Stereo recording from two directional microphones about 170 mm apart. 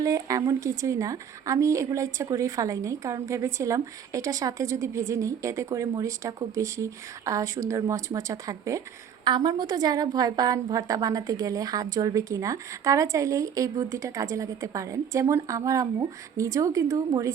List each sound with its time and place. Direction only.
0.0 s a woman's voice: 20° right (ahead or behind)